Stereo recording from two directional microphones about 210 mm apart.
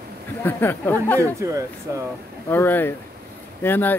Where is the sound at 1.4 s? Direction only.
15° right (ahead or behind).